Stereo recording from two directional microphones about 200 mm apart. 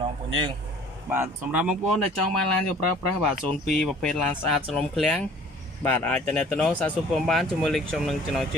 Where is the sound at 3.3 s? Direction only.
50° left (ahead or behind).